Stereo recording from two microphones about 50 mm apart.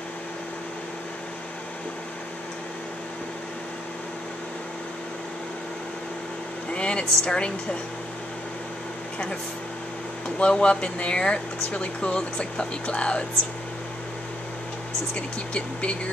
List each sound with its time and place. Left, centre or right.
6.7 s speech: left
10.4 s speech: left
15.1 s speech: left